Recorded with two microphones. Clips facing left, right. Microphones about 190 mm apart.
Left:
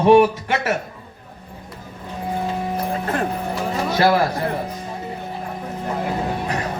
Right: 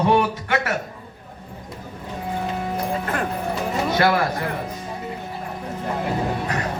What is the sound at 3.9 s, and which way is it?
Speech, 30° left (ahead or behind).